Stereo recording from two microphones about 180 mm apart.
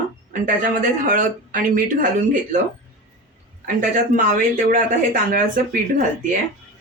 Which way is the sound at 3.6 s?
50° right (ahead or behind).